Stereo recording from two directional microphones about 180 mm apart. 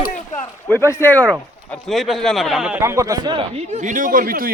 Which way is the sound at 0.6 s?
10° left (ahead or behind).